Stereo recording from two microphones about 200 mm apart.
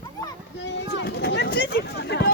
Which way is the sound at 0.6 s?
60° left (ahead or behind).